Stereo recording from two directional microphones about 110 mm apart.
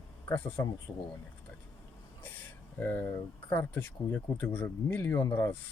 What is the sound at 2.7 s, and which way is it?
Speech, 20° left (ahead or behind).